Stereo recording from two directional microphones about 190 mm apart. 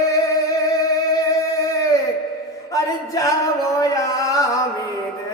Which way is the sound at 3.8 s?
15° left (ahead or behind).